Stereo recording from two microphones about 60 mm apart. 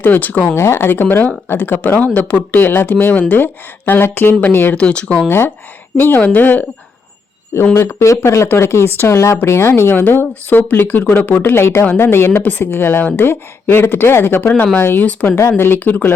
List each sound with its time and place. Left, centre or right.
0.0 s speech: left
0.5 s speech: left
4.7 s speech: centre
6.0 s speech: left
8.0 s speech: left
9.1 s speech: left
10.0 s speech: left
11.5 s speech: left
15.5 s speech: left